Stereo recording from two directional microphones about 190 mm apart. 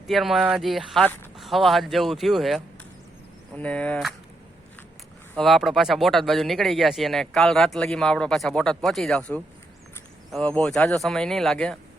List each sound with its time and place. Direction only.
0.1 s speech: centre (ahead or behind)
5.3 s speech: centre (ahead or behind)